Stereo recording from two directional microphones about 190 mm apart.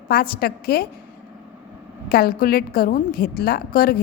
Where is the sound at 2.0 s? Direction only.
50° left (ahead or behind).